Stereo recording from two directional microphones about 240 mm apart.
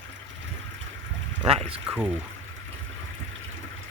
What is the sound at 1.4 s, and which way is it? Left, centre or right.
Speech, right.